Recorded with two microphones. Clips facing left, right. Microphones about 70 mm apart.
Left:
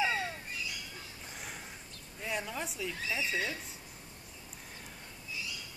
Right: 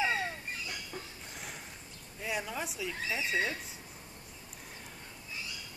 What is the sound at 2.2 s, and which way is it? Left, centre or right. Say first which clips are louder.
Speech: right 1 dB; centre.